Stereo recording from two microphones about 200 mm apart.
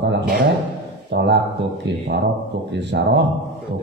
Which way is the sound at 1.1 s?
60° right (ahead or behind).